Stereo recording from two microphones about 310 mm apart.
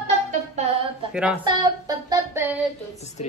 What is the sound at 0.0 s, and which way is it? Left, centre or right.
Music, right.